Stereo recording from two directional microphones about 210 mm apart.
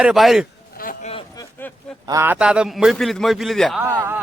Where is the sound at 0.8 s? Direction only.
40° left (ahead or behind).